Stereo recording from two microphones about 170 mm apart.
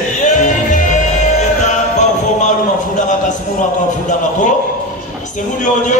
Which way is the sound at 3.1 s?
50° left (ahead or behind).